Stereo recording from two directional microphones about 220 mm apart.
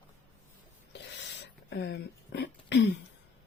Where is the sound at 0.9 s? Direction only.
50° left (ahead or behind).